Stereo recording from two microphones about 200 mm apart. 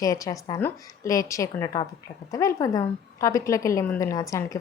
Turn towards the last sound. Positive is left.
turn(degrees=15)  # may be behind; listen again after turning